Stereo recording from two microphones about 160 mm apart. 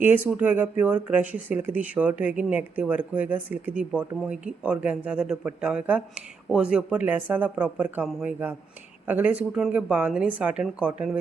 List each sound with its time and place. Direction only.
0.0 s speech: 10° right (ahead or behind)